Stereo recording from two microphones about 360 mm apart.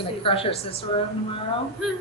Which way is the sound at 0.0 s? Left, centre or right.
Centre.